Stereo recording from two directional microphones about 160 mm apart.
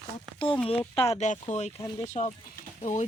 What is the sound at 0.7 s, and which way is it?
Speech, 35° left (ahead or behind).